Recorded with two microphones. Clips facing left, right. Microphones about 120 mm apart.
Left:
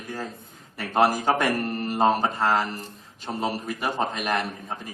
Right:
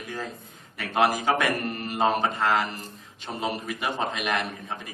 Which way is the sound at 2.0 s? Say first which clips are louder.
Left 2 dB; 5° left (ahead or behind).